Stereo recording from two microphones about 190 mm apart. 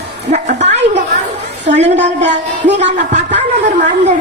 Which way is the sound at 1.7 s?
40° right (ahead or behind).